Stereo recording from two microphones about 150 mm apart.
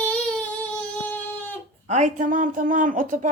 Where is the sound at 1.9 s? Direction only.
55° right (ahead or behind).